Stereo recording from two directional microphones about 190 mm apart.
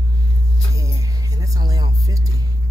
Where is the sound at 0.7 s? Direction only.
15° right (ahead or behind).